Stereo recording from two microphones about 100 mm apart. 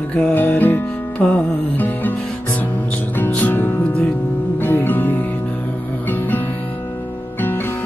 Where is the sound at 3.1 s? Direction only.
15° left (ahead or behind).